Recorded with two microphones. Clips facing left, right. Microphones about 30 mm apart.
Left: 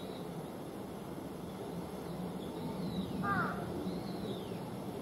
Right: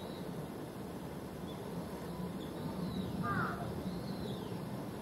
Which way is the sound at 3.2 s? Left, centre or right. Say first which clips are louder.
Left 3 dB; left.